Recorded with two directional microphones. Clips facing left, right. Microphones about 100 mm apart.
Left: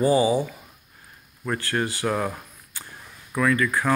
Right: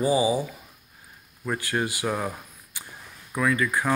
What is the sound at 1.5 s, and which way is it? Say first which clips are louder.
Speech: left 1 dB; 15° right (ahead or behind).